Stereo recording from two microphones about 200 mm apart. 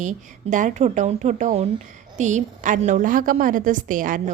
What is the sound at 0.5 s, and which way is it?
A woman's voice, 35° right (ahead or behind).